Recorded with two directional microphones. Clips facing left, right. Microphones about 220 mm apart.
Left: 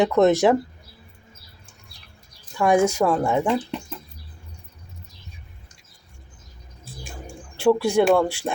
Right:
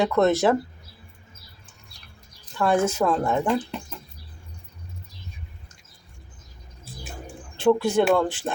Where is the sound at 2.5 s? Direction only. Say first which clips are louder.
Left 3 dB; 15° left (ahead or behind).